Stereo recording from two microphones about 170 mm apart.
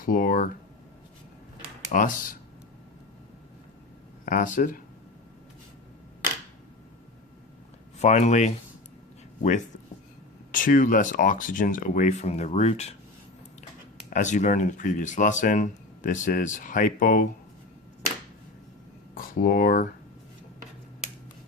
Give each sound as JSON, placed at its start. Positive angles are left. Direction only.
{"t": 0.0, "sound": "speech", "side_deg": 55}
{"t": 1.9, "sound": "speech", "side_deg": 50}
{"t": 4.3, "sound": "speech", "side_deg": 50}
{"t": 7.9, "sound": "speech", "side_deg": 40}
{"t": 14.1, "sound": "speech", "side_deg": 45}
{"t": 19.1, "sound": "speech", "side_deg": 55}